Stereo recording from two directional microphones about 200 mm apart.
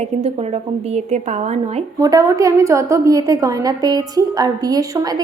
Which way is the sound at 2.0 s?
15° right (ahead or behind).